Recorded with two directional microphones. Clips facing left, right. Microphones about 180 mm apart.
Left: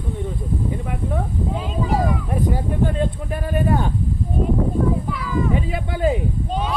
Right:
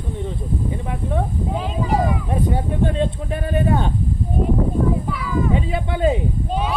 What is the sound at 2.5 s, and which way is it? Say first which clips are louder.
Speech: right 1 dB; 25° right (ahead or behind).